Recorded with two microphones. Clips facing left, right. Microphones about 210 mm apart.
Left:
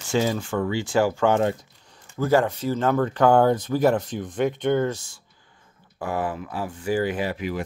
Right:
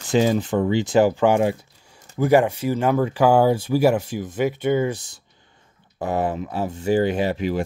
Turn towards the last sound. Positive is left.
turn(degrees=-30)  # may be behind; listen again after turning